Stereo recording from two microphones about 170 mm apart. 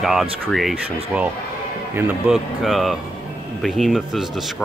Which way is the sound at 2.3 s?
Centre (ahead or behind).